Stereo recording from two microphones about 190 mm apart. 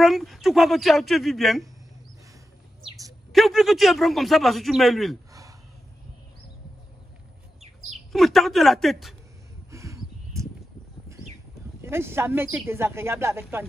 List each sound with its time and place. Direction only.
0.0 s speech: centre (ahead or behind)
3.3 s speech: centre (ahead or behind)
7.6 s chirp: 35° right (ahead or behind)
8.1 s speech: centre (ahead or behind)
9.7 s a sound: 15° right (ahead or behind)
11.8 s speech: 15° right (ahead or behind)